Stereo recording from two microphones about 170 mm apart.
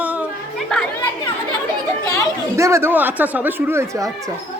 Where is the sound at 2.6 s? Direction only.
15° right (ahead or behind).